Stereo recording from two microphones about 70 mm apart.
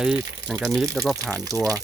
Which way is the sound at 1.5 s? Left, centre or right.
Right.